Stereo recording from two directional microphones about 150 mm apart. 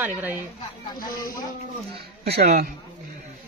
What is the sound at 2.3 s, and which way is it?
Speech, 90° right.